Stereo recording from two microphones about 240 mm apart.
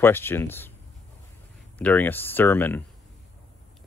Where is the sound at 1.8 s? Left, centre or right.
Centre.